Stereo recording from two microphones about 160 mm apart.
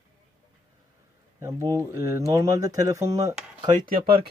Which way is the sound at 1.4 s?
20° right (ahead or behind).